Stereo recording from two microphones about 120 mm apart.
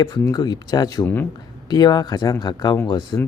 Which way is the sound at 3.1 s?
25° left (ahead or behind).